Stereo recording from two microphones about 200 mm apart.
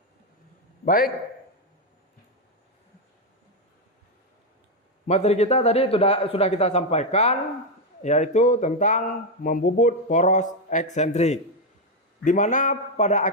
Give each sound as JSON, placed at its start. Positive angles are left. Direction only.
{"t": 0.9, "sound": "a man's voice", "side_deg": 45}
{"t": 5.0, "sound": "speech", "side_deg": 35}